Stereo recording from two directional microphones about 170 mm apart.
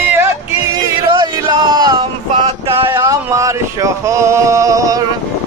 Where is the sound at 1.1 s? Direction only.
25° right (ahead or behind).